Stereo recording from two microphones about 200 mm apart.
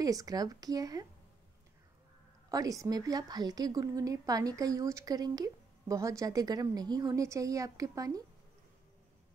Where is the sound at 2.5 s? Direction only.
15° right (ahead or behind).